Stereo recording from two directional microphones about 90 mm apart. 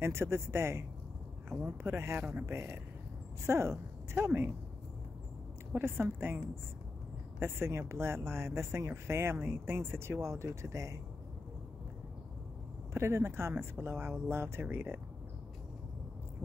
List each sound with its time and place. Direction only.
0.0 s speech: 30° right (ahead or behind)
5.7 s speech: 25° right (ahead or behind)
12.9 s speech: 30° right (ahead or behind)